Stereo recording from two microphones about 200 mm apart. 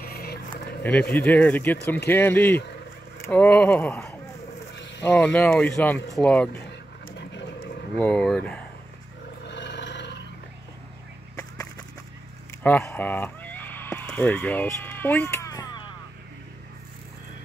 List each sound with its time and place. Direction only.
0.1 s music: 50° left (ahead or behind)
0.8 s speech: 5° left (ahead or behind)
4.7 s a sound: 60° left (ahead or behind)
5.0 s speech: 5° left (ahead or behind)
7.1 s dog: 60° left (ahead or behind)
8.0 s speech: 5° left (ahead or behind)
9.4 s a sound: 60° left (ahead or behind)
12.6 s neigh: 10° left (ahead or behind)